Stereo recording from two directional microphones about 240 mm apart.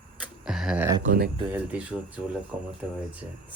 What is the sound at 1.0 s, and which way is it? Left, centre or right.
Speech, right.